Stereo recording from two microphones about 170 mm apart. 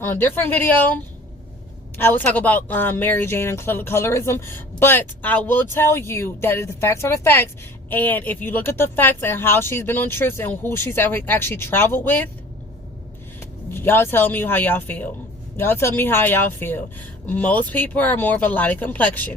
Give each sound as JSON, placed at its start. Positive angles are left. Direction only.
{"t": 0.0, "sound": "speech", "side_deg": 10}
{"t": 2.0, "sound": "speech", "side_deg": 10}
{"t": 13.7, "sound": "speech", "side_deg": 15}